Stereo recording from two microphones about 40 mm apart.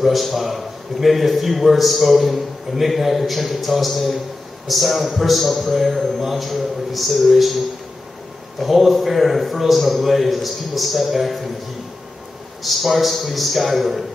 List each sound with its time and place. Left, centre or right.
0.0 s a man's voice: centre
8.5 s a man's voice: centre
12.6 s a man's voice: centre